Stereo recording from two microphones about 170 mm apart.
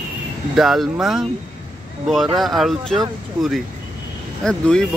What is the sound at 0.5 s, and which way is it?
Speech, centre (ahead or behind).